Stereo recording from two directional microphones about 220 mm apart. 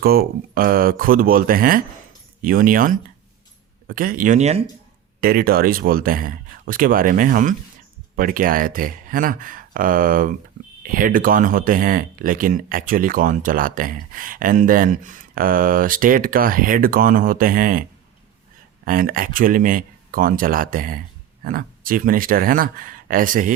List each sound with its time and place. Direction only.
0.0 s speech: 45° right (ahead or behind)
5.2 s speech: 45° right (ahead or behind)
18.9 s speech: 40° right (ahead or behind)